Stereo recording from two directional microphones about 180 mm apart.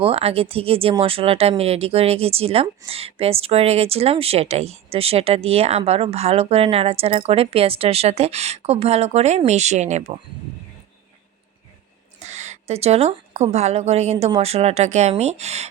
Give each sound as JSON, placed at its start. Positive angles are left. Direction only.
{"t": 0.0, "sound": "speech", "side_deg": -35}
{"t": 12.2, "sound": "a woman's voice", "side_deg": -40}